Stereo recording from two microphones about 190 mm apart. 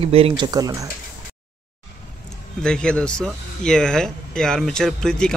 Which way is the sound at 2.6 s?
5° left (ahead or behind).